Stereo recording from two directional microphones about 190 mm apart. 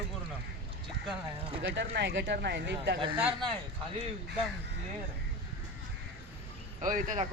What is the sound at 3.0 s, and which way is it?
Speech, 25° right (ahead or behind).